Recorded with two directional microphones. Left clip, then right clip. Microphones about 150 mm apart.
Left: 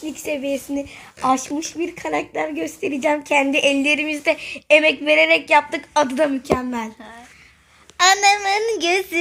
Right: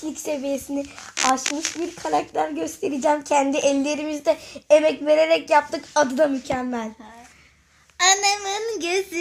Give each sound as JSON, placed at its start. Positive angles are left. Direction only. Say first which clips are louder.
{"t": 0.0, "sound": "a woman's voice", "louder": "left 2 dB", "side_deg": -5}
{"t": 6.5, "sound": "a woman's voice", "louder": "left 4 dB", "side_deg": 10}
{"t": 7.9, "sound": "a woman's voice", "louder": "left 5 dB", "side_deg": 50}